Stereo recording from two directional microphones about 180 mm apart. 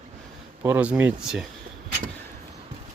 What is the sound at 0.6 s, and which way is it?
Speech, 10° right (ahead or behind).